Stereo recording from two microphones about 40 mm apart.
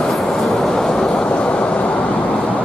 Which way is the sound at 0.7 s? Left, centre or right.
Centre.